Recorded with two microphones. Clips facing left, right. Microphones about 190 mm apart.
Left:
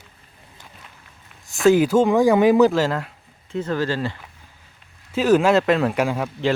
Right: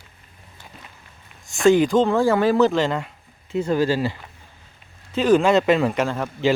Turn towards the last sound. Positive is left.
turn(degrees=10)  # may be behind; listen again after turning